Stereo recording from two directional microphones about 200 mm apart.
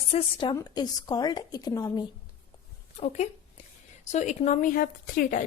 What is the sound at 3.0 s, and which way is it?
A woman's voice, 35° left (ahead or behind).